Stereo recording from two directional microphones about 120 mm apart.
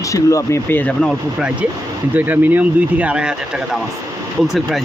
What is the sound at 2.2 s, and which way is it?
Speech, 15° right (ahead or behind).